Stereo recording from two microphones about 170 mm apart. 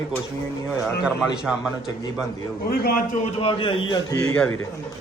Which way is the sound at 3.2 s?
35° left (ahead or behind).